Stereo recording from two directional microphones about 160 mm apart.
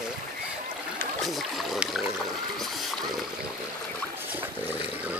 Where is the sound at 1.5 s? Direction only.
Centre (ahead or behind).